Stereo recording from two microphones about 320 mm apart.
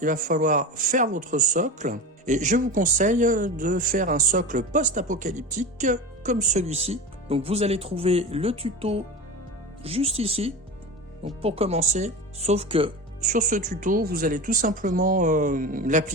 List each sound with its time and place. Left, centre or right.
0.0 s speech: right